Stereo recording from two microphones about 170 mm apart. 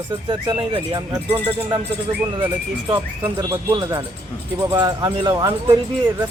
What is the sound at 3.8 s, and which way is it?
Speech, 25° right (ahead or behind).